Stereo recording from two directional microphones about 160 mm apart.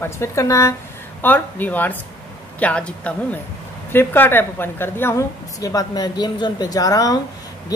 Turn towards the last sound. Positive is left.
turn(degrees=20)  # may be behind; listen again after turning